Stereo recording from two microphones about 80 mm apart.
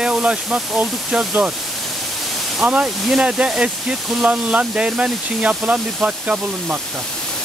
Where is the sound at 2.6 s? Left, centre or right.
Centre.